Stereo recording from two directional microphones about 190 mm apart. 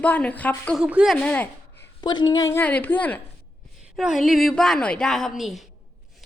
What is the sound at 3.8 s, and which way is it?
A woman's voice, 5° right (ahead or behind).